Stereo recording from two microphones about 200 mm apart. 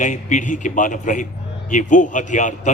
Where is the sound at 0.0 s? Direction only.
40° left (ahead or behind).